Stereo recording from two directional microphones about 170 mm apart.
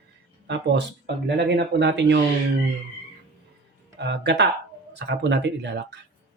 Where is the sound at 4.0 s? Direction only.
90° right.